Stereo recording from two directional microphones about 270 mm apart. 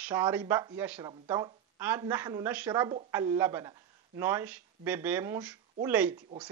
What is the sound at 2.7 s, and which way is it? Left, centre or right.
A woman's voice, centre.